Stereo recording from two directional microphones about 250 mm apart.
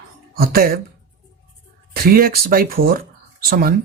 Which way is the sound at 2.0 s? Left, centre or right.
Right.